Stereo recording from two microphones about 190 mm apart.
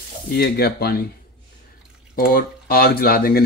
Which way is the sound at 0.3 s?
55° left (ahead or behind).